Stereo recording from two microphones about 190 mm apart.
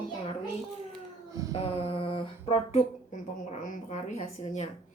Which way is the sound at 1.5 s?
30° left (ahead or behind).